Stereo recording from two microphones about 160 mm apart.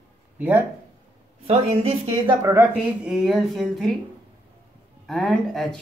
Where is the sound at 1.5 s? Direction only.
40° right (ahead or behind).